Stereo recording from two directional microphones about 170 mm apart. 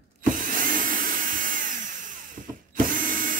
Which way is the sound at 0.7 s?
55° right (ahead or behind).